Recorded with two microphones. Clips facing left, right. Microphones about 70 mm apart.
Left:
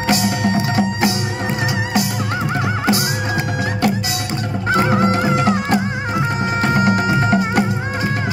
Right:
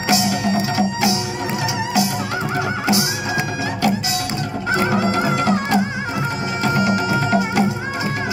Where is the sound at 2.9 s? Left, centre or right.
Left.